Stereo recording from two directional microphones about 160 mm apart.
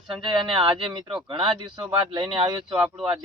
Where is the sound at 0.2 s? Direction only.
35° right (ahead or behind).